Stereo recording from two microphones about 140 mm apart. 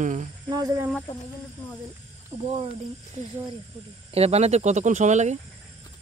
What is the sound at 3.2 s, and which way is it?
Speech, 55° right (ahead or behind).